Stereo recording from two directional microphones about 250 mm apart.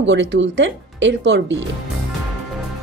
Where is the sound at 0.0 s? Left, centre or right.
Right.